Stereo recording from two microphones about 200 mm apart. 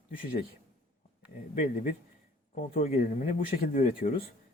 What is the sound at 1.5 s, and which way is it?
Speech, 40° left (ahead or behind).